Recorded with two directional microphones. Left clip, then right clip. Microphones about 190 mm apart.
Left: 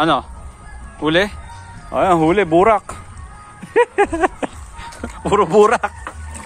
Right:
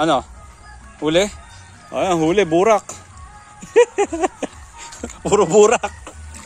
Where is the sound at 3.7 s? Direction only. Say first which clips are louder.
Even; 30° right (ahead or behind).